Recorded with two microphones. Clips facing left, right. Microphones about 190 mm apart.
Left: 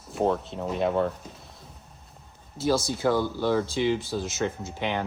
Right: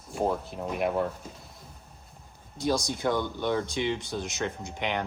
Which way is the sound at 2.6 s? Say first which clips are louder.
Left 3 dB; 15° right (ahead or behind).